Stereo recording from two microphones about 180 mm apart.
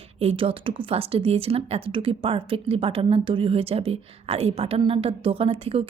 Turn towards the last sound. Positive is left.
turn(degrees=-30)  # may be behind; listen again after turning